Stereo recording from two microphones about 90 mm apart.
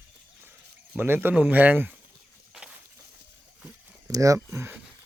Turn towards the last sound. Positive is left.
turn(degrees=-25)  # may be behind; listen again after turning